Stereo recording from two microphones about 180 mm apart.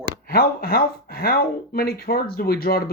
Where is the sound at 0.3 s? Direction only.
60° left (ahead or behind).